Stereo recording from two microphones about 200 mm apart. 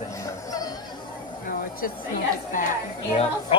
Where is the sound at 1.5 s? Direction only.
45° left (ahead or behind).